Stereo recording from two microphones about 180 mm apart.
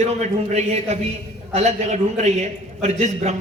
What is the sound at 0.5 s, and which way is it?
A man's voice, 35° right (ahead or behind).